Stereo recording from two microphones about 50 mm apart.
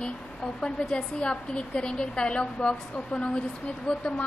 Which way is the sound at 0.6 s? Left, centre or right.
Centre.